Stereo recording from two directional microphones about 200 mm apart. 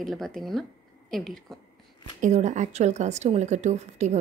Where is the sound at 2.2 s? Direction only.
35° right (ahead or behind).